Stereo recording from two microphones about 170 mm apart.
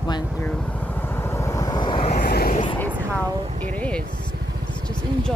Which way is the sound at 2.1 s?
60° left (ahead or behind).